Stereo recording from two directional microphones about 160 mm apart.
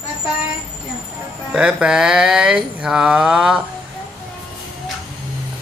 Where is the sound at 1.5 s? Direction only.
5° right (ahead or behind).